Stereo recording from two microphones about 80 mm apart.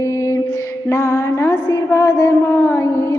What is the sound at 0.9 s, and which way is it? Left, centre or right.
A woman's voice, left.